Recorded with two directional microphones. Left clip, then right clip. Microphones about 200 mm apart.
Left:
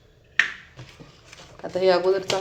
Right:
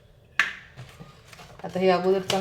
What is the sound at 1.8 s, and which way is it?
Speech, 35° left (ahead or behind).